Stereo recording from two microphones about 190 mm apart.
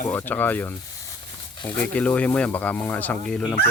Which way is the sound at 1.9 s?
5° left (ahead or behind).